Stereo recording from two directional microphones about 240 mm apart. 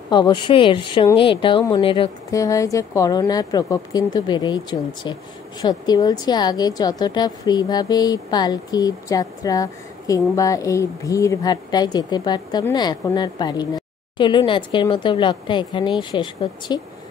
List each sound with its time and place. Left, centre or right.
0.1 s a woman's voice: centre